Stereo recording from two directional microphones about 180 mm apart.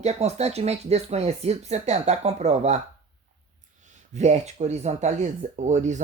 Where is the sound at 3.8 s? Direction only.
40° right (ahead or behind).